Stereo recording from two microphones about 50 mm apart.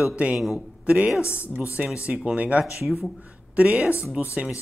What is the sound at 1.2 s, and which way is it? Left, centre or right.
Speech, left.